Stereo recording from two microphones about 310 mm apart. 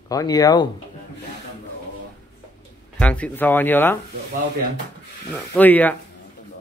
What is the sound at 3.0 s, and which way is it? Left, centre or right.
Speech, centre.